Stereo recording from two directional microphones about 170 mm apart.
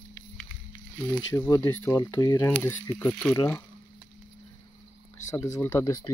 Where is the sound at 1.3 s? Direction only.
20° left (ahead or behind).